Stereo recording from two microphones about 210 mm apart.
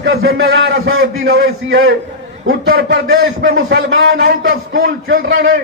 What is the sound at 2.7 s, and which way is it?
A man's voice, 55° right (ahead or behind).